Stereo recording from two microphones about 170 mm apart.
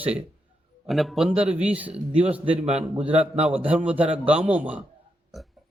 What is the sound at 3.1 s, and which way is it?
Speech, 40° right (ahead or behind).